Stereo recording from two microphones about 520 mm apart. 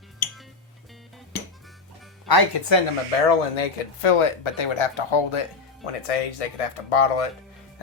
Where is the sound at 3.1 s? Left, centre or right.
Left.